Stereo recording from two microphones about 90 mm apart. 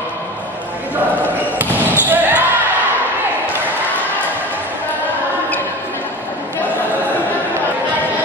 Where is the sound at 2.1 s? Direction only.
20° right (ahead or behind).